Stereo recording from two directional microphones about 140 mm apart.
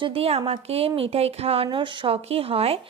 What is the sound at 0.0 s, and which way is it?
A woman's voice, 45° right (ahead or behind).